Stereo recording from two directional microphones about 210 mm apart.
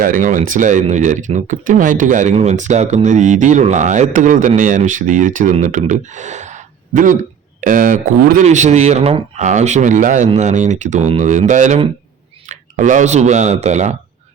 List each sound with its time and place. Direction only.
0.0 s speech: 40° right (ahead or behind)